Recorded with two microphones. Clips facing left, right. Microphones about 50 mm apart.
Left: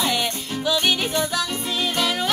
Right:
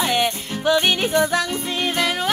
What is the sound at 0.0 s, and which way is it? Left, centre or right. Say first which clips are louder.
Music: right 3 dB; right.